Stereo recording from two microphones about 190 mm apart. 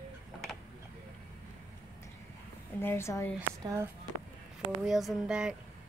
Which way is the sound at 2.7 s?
10° left (ahead or behind).